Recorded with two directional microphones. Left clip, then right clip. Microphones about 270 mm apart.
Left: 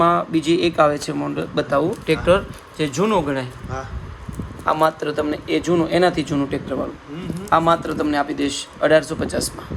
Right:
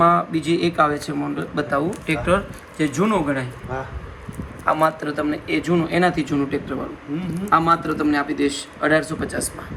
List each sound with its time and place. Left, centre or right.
0.0 s speech: left
4.6 s speech: left